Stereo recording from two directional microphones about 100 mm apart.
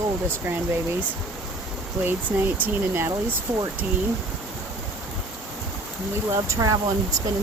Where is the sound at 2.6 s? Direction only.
25° right (ahead or behind).